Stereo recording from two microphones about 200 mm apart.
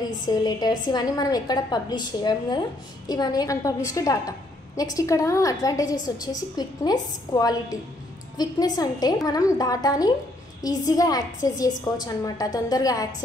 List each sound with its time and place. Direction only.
0.2 s a woman's voice: 20° left (ahead or behind)